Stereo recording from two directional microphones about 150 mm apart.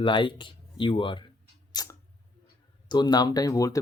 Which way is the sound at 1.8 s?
25° left (ahead or behind).